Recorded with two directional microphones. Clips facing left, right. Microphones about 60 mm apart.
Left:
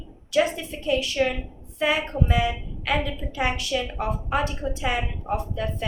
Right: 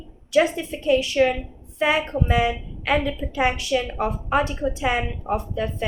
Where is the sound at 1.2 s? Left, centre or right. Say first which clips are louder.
Right 5 dB; right.